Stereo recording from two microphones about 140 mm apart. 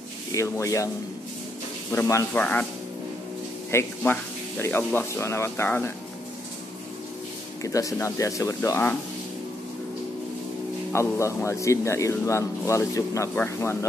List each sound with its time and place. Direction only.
0.3 s speech: 20° left (ahead or behind)
1.9 s speech: 20° left (ahead or behind)
3.7 s speech: 15° left (ahead or behind)
7.6 s speech: 25° left (ahead or behind)
10.9 s speech: 20° left (ahead or behind)